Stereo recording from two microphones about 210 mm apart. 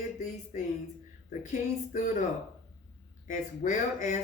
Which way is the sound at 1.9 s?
40° left (ahead or behind).